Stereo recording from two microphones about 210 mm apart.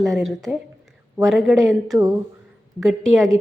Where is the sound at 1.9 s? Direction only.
15° right (ahead or behind).